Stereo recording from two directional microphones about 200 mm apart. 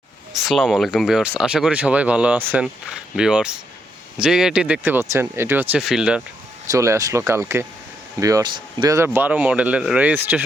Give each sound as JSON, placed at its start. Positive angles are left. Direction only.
{"t": 0.4, "sound": "speech", "side_deg": 0}
{"t": 6.7, "sound": "speech", "side_deg": -15}
{"t": 9.1, "sound": "speech", "side_deg": -10}